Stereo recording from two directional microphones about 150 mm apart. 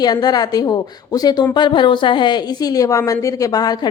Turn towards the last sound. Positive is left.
turn(degrees=25)  # may be behind; listen again after turning